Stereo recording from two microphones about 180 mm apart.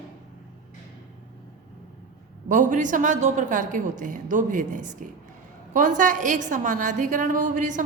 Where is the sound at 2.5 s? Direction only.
45° right (ahead or behind).